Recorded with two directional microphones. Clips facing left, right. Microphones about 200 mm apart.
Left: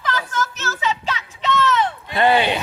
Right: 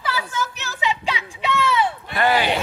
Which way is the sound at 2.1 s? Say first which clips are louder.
Left 3 dB; 25° left (ahead or behind).